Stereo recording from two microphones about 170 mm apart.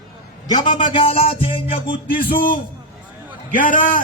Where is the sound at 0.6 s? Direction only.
50° left (ahead or behind).